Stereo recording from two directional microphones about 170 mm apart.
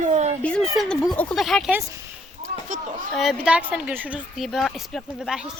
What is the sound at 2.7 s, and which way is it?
Speech, 50° right (ahead or behind).